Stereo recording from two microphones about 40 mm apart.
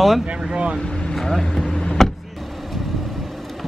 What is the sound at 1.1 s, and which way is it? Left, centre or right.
Speech, centre.